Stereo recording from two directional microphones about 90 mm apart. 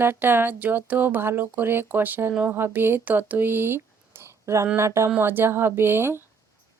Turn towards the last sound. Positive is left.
turn(degrees=-25)  # may be behind; listen again after turning